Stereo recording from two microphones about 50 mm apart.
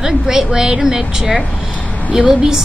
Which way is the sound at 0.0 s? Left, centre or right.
Centre.